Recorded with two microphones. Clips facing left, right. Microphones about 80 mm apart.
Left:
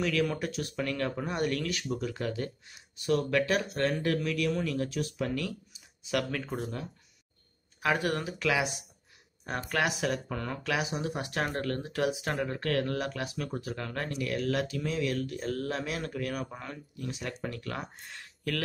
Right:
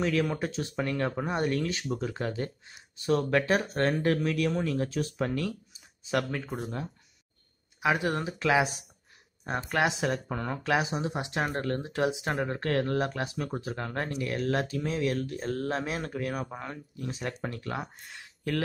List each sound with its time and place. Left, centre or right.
0.0 s speech: right
6.3 s speech: centre
7.8 s speech: centre; by 17.7 s right
17.9 s speech: centre